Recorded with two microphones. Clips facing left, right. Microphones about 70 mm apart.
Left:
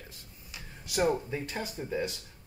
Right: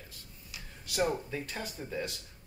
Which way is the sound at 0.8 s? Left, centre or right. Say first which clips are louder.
Left 3 dB; centre.